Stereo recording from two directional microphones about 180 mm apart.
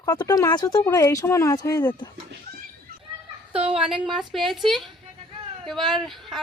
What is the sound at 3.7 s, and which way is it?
Speech, 5° right (ahead or behind).